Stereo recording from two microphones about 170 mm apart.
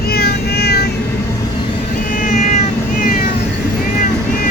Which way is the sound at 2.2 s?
45° left (ahead or behind).